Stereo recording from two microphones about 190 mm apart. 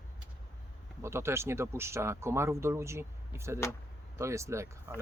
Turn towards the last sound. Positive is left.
turn(degrees=-15)  # may be behind; listen again after turning